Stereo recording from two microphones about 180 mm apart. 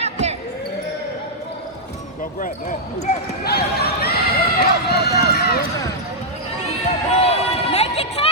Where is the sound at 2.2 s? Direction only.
50° left (ahead or behind).